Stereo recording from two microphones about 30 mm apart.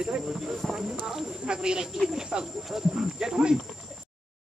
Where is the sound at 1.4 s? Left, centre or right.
Right.